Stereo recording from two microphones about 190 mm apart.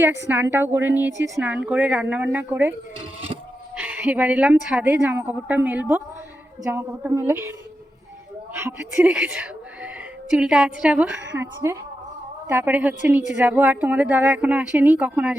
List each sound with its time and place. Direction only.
0.3 s a woman's voice: 10° right (ahead or behind)
3.0 s a sound: 30° right (ahead or behind)
3.8 s a woman's voice: 10° right (ahead or behind)
8.5 s a woman's voice: 10° right (ahead or behind)